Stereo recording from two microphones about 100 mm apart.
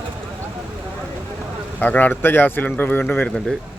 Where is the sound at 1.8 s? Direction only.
15° left (ahead or behind).